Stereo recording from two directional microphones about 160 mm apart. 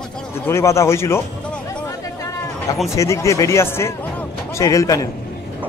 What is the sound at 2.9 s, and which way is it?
Speech, 20° left (ahead or behind).